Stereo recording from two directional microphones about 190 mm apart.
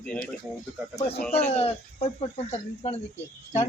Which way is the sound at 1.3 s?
35° left (ahead or behind).